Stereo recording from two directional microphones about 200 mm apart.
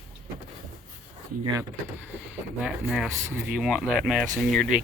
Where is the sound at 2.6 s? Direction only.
5° right (ahead or behind).